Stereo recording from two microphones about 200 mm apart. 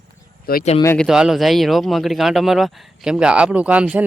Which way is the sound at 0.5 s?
50° left (ahead or behind).